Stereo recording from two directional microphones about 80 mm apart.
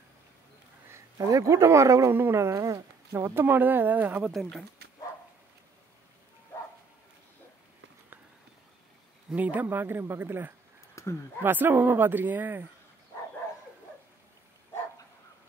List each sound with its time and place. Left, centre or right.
1.1 s speech: right
4.2 s speech: centre
9.3 s speech: centre
11.0 s a sound: left
11.4 s speech: right